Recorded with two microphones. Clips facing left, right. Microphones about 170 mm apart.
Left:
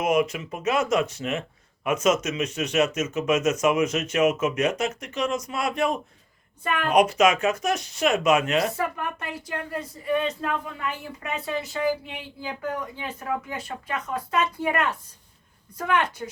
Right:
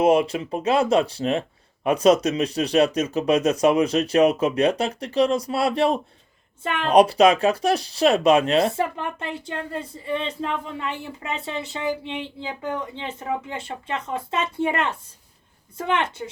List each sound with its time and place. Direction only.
0.0 s speech: 30° right (ahead or behind)